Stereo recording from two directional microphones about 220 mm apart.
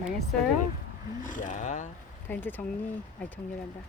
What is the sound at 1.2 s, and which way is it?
Speech, 35° left (ahead or behind).